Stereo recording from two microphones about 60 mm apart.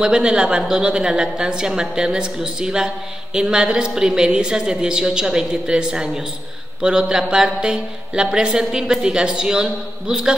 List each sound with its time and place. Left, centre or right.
0.0 s speech: centre